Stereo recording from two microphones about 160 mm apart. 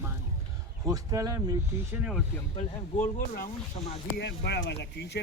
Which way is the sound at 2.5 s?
55° left (ahead or behind).